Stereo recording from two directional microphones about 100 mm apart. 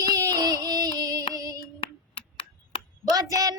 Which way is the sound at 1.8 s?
65° left (ahead or behind).